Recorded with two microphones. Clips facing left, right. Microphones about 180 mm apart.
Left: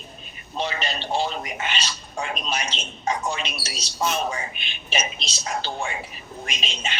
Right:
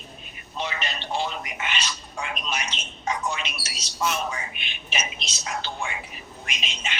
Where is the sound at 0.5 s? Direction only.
30° left (ahead or behind).